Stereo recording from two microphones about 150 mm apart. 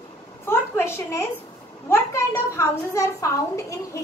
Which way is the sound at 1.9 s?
15° left (ahead or behind).